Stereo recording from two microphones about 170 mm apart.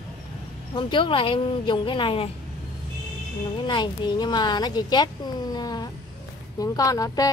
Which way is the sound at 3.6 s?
25° left (ahead or behind).